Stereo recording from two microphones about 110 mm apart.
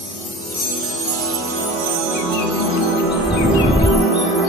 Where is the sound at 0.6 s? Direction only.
Centre (ahead or behind).